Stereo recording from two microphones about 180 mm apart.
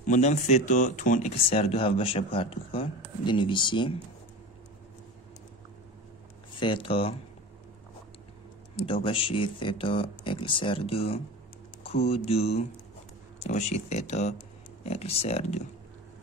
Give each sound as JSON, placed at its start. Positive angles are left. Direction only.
{"t": 0.0, "sound": "speech", "side_deg": 40}
{"t": 6.6, "sound": "speech", "side_deg": 30}
{"t": 8.8, "sound": "speech", "side_deg": 30}